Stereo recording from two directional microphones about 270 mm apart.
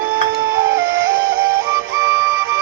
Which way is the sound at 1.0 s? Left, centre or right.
Right.